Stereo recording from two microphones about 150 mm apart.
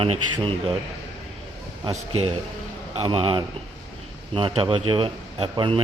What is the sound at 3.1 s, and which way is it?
Speech, 35° right (ahead or behind).